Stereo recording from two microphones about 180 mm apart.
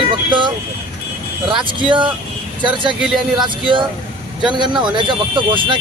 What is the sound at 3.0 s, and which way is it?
Speech, 5° right (ahead or behind).